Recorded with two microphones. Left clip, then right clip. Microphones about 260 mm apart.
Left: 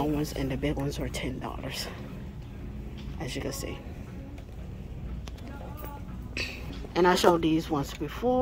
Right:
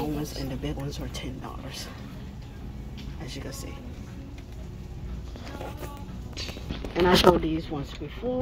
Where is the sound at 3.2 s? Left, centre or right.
Left.